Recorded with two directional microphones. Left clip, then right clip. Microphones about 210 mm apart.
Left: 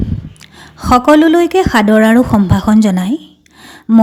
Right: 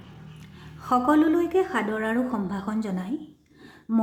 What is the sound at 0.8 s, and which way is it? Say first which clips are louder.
A woman's voice: left 13 dB; 40° left (ahead or behind).